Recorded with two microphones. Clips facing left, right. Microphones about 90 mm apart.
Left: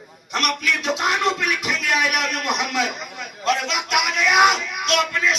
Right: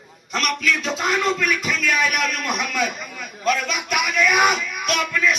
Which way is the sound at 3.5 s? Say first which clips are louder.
Left 1 dB; 85° left.